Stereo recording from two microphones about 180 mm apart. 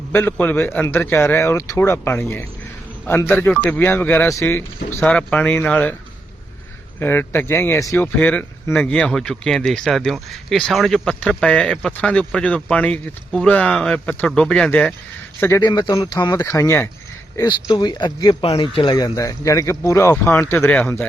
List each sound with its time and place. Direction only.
0.1 s a man's voice: 10° left (ahead or behind)
7.0 s a man's voice: 10° left (ahead or behind)
15.6 s speech: 20° left (ahead or behind)